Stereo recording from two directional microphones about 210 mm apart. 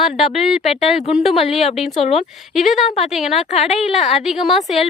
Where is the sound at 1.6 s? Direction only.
30° left (ahead or behind).